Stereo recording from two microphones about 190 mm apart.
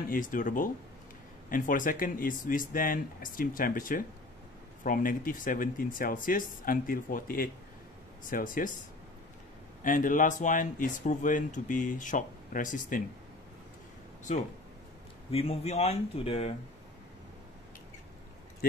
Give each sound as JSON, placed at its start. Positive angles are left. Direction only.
{"t": 0.1, "sound": "speech", "side_deg": 45}
{"t": 9.8, "sound": "speech", "side_deg": 45}
{"t": 14.3, "sound": "speech", "side_deg": 40}